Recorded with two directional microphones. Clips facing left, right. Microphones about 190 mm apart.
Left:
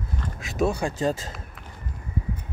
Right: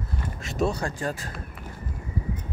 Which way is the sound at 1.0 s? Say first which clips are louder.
Left 5 dB; 25° left (ahead or behind).